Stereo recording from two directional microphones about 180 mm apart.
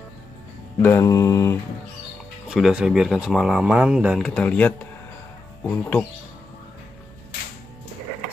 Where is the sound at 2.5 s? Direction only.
5° right (ahead or behind).